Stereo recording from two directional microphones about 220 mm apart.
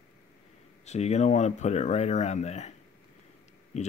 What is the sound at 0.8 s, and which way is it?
Speech, 30° left (ahead or behind).